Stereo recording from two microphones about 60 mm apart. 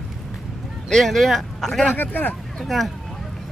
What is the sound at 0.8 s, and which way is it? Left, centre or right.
Speech, centre.